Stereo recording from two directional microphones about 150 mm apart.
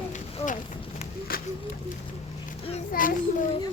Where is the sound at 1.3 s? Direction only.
75° left (ahead or behind).